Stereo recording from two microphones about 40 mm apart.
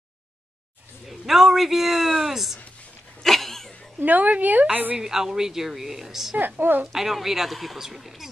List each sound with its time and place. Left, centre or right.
1.0 s a man's voice: centre
3.2 s a sound: centre
4.0 s a woman's voice: right
4.9 s a woman's voice: centre
6.3 s a woman's voice: right
6.9 s speech: centre